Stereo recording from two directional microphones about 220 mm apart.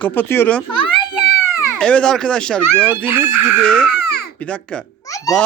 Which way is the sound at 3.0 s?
10° right (ahead or behind).